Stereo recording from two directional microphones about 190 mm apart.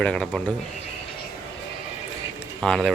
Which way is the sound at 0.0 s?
5° left (ahead or behind).